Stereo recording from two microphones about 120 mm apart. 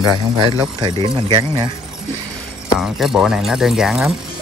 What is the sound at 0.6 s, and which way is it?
Speech, 35° right (ahead or behind).